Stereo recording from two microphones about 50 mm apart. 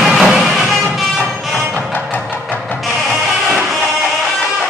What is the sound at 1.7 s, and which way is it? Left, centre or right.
Music, left.